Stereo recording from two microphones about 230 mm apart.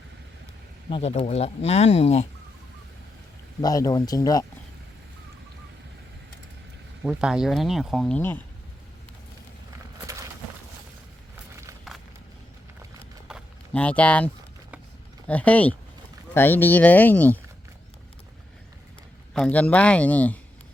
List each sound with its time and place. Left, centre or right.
0.9 s speech: left
3.6 s speech: centre
7.0 s speech: centre
13.2 s a sound: centre
15.3 s speech: centre
19.3 s speech: centre